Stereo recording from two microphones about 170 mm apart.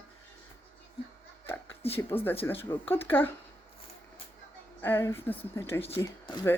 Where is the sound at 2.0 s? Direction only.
10° left (ahead or behind).